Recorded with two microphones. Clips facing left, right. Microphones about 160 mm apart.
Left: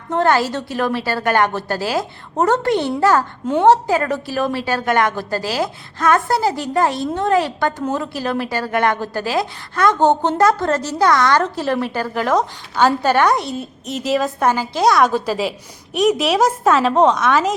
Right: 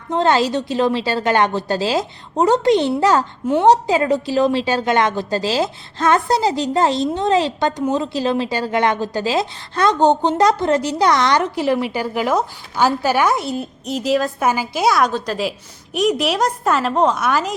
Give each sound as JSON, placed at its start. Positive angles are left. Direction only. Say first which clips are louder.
{"t": 0.1, "sound": "a woman's voice", "louder": "even", "side_deg": -20}
{"t": 3.5, "sound": "a woman's voice", "louder": "even", "side_deg": -10}
{"t": 3.8, "sound": "a woman's voice", "louder": "right 2 dB", "side_deg": -20}